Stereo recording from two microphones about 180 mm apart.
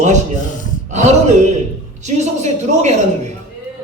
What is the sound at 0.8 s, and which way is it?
A man's voice, 40° right (ahead or behind).